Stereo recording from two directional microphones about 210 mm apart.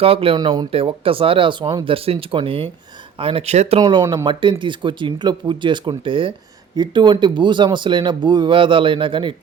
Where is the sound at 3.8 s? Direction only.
20° right (ahead or behind).